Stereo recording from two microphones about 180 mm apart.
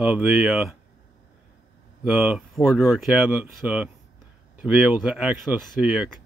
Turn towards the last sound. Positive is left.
turn(degrees=-5)  # may be behind; listen again after turning